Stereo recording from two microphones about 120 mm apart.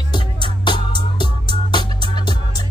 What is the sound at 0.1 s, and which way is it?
Music, 40° left (ahead or behind).